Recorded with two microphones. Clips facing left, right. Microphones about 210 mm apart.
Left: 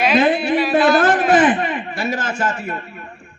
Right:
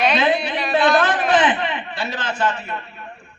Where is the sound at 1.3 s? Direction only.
45° left (ahead or behind).